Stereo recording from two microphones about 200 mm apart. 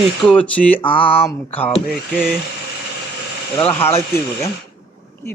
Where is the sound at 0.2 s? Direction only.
5° left (ahead or behind).